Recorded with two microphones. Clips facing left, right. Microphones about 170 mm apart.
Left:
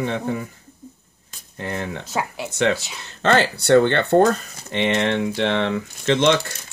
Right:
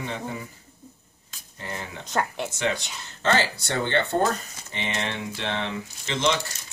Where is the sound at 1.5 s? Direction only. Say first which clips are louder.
Left 8 dB; 65° left (ahead or behind).